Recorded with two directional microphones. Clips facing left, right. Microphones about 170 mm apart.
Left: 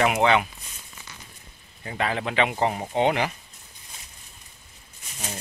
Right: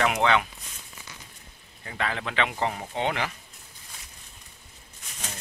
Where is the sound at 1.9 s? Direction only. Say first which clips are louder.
Left 4 dB; 20° left (ahead or behind).